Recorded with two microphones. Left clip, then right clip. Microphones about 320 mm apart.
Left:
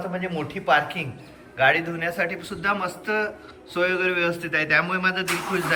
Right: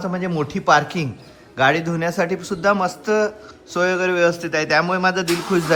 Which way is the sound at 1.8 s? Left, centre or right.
Centre.